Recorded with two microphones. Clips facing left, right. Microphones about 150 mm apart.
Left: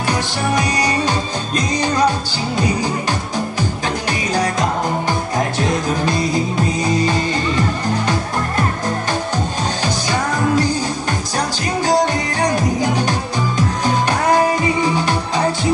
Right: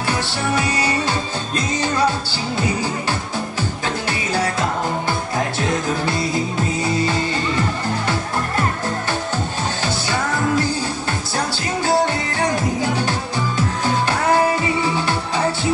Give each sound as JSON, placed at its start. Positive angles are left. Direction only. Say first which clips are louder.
{"t": 0.0, "sound": "music", "louder": "left 2 dB", "side_deg": 15}
{"t": 4.3, "sound": "music", "louder": "left 2 dB", "side_deg": 15}
{"t": 10.6, "sound": "music", "louder": "left 3 dB", "side_deg": 15}